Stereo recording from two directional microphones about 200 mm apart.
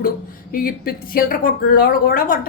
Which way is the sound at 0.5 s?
45° left (ahead or behind).